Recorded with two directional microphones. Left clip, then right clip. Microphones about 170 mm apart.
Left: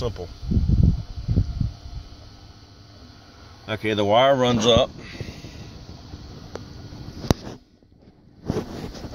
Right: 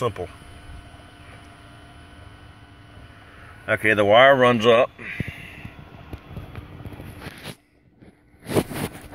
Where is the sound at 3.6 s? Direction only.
20° left (ahead or behind).